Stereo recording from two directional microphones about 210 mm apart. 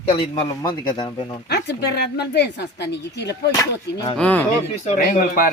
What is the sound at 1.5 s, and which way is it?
Speech, 50° left (ahead or behind).